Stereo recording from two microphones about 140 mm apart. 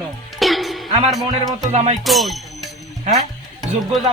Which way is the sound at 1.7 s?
50° right (ahead or behind).